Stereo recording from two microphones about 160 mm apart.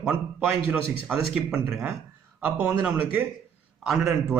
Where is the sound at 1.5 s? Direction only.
15° right (ahead or behind).